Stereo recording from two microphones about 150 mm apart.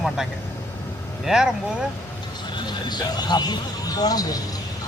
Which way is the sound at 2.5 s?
30° left (ahead or behind).